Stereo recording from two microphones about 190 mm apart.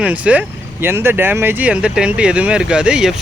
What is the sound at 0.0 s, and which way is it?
Speech, 5° right (ahead or behind).